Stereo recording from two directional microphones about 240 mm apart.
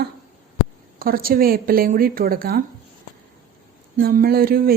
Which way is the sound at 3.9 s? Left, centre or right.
Right.